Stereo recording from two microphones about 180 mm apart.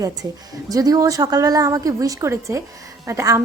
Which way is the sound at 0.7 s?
20° right (ahead or behind).